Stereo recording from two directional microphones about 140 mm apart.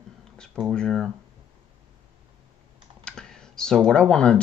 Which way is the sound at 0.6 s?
Centre (ahead or behind).